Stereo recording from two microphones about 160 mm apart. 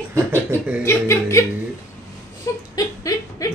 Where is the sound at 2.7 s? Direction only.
20° left (ahead or behind).